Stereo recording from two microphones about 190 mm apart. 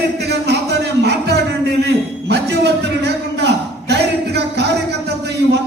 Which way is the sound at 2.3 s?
60° right (ahead or behind).